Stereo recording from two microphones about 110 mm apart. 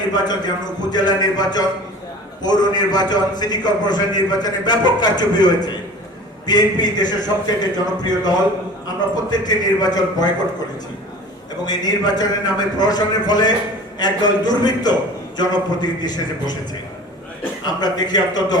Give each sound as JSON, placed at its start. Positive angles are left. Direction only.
{"t": 0.1, "sound": "a man's voice", "side_deg": 40}
{"t": 11.6, "sound": "a man's voice", "side_deg": 35}
{"t": 17.7, "sound": "a man's voice", "side_deg": 40}